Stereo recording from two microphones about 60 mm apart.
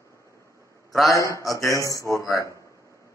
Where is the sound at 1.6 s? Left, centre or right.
Left.